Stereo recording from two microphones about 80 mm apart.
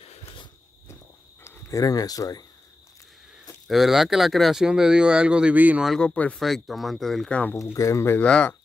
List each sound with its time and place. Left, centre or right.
1.7 s speech: left
3.6 s speech: centre
5.9 s speech: centre
6.4 s speech: centre
7.5 s speech: left
8.2 s speech: centre